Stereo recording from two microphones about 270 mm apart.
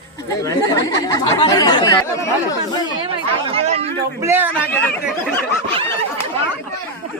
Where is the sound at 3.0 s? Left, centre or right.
Centre.